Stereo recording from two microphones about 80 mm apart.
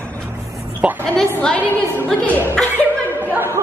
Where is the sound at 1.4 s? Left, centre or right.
Centre.